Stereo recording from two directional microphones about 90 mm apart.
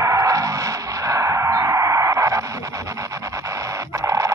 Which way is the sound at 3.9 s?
35° right (ahead or behind).